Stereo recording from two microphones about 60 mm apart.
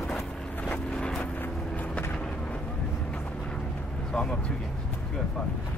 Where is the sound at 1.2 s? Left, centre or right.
Left.